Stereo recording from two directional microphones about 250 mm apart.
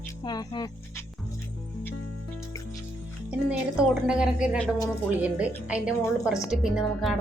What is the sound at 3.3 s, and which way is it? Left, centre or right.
Speech, centre.